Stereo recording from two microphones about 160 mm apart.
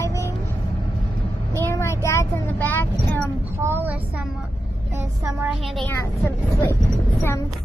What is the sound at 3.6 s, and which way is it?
Speech, 15° right (ahead or behind).